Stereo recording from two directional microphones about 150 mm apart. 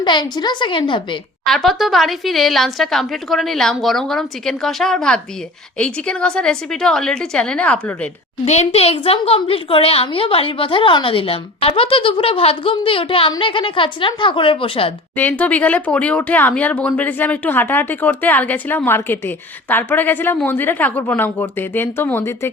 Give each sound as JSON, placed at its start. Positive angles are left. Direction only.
{"t": 0.0, "sound": "a woman's voice", "side_deg": 30}
{"t": 1.5, "sound": "a woman's voice", "side_deg": 0}
{"t": 8.4, "sound": "a woman's voice", "side_deg": 45}
{"t": 15.1, "sound": "speech", "side_deg": 10}